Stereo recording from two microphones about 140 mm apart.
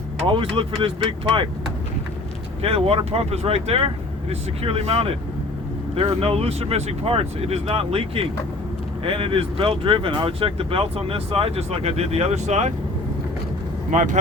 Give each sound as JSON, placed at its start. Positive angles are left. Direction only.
{"t": 0.3, "sound": "speech", "side_deg": -40}
{"t": 2.6, "sound": "speech", "side_deg": -45}
{"t": 13.9, "sound": "speech", "side_deg": -55}